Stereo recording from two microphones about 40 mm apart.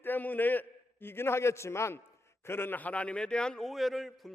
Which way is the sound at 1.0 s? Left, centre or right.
Left.